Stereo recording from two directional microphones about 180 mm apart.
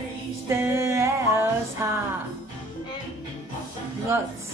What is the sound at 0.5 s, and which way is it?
Music, 15° right (ahead or behind).